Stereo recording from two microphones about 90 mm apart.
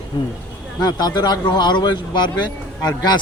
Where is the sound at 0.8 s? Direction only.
45° left (ahead or behind).